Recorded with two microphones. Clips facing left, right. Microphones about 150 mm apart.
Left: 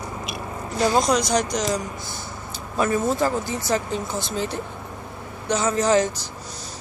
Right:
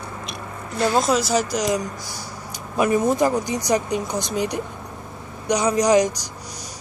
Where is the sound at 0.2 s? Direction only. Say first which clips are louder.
Left 2 dB; centre (ahead or behind).